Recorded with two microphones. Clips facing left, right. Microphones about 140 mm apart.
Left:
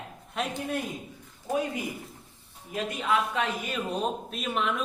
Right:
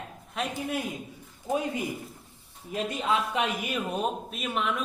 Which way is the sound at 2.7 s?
25° right (ahead or behind).